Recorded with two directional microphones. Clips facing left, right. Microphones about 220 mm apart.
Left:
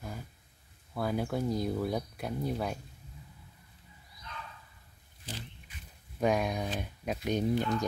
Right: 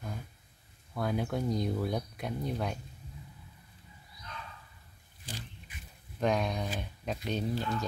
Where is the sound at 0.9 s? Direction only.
5° left (ahead or behind).